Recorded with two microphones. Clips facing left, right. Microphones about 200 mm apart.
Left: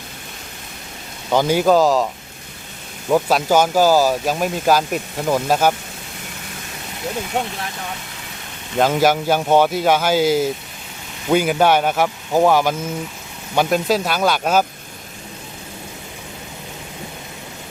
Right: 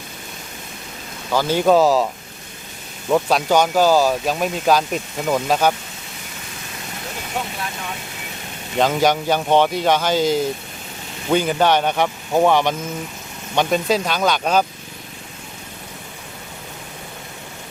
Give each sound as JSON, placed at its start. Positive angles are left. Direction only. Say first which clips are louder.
{"t": 1.3, "sound": "speech", "louder": "left 3 dB", "side_deg": 20}
{"t": 1.5, "sound": "speech", "louder": "right 2 dB", "side_deg": 0}
{"t": 3.1, "sound": "speech", "louder": "left 1 dB", "side_deg": 5}
{"t": 8.8, "sound": "speech", "louder": "left 1 dB", "side_deg": 5}